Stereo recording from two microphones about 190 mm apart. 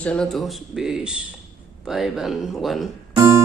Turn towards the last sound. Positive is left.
turn(degrees=-15)  # may be behind; listen again after turning